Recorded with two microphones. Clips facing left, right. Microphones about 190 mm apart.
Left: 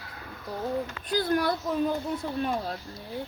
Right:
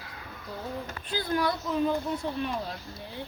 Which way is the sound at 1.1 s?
50° left (ahead or behind).